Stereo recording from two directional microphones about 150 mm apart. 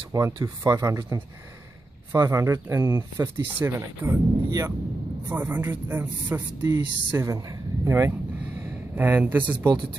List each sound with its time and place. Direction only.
0.1 s speech: 20° right (ahead or behind)